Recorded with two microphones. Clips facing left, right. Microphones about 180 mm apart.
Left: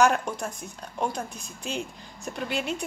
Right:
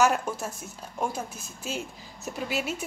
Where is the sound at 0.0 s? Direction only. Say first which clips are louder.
Left 1 dB; 5° right (ahead or behind).